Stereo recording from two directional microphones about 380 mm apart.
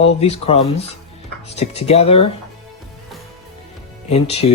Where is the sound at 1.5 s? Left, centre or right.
Centre.